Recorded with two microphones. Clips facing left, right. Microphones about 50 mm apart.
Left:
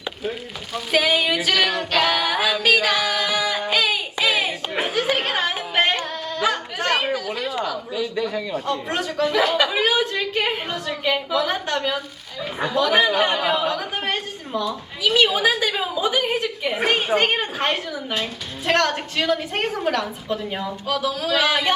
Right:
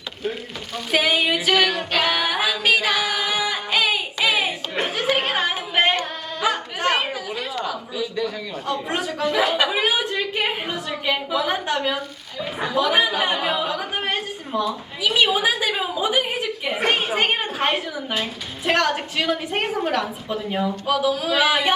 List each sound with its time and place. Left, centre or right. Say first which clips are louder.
0.7 s music: left 1 dB; centre
4.7 s a sound: left 1 dB; centre
5.1 s music: right 1 dB; centre
6.4 s chatter: right 1 dB; centre
7.9 s a man's voice: left 2 dB; centre
8.6 s a woman's voice: even; centre